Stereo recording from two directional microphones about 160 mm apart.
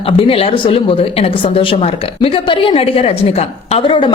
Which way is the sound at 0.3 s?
35° left (ahead or behind).